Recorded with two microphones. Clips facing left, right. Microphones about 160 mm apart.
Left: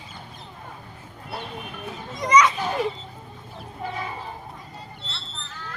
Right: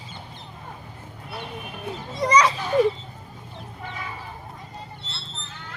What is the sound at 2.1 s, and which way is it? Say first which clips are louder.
Children playing: left 1 dB; 30° right (ahead or behind).